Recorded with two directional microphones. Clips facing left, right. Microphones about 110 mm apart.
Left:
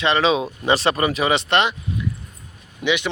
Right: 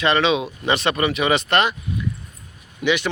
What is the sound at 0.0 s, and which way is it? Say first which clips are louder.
Speech: even; 30° left (ahead or behind).